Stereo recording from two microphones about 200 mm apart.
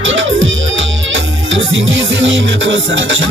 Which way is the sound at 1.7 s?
70° right (ahead or behind).